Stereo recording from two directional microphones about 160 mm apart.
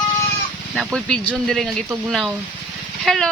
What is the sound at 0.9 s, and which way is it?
Speech, 5° left (ahead or behind).